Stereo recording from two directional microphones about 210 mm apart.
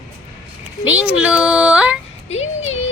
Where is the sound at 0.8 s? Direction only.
5° right (ahead or behind).